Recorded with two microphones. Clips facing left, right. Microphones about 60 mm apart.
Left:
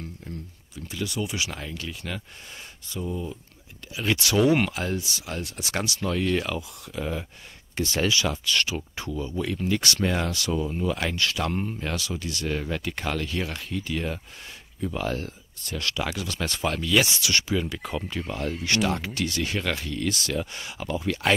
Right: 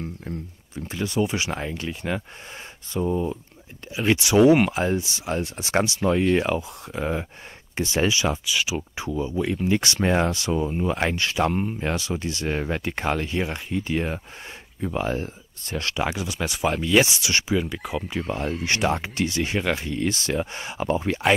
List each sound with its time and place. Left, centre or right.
0.3 s speech: right
3.9 s speech: right
8.5 s speech: centre
17.6 s speech: centre
18.0 s speech: right